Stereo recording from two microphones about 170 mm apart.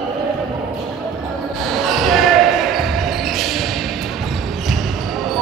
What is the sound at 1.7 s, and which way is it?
Basketball bounce, centre (ahead or behind).